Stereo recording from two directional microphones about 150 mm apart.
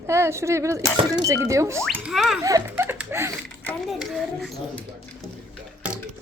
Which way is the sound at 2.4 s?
20° right (ahead or behind).